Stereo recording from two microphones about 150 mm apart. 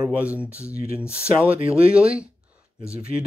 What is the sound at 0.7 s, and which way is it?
Speech, 80° left.